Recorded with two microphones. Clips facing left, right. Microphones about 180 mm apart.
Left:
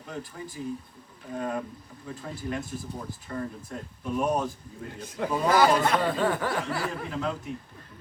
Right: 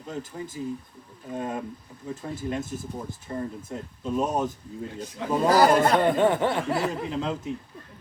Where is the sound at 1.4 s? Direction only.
20° right (ahead or behind).